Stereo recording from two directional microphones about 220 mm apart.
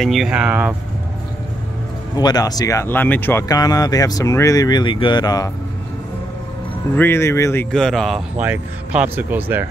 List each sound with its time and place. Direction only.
0.0 s speech: centre (ahead or behind)
2.1 s speech: 20° left (ahead or behind)
7.0 s speech: 10° left (ahead or behind)
7.7 s speech: centre (ahead or behind)